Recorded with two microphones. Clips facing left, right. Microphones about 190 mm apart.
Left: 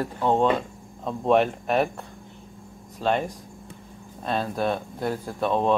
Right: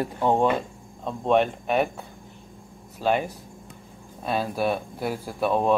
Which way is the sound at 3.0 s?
5° right (ahead or behind).